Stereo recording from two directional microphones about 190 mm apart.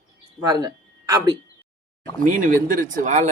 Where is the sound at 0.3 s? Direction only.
20° right (ahead or behind).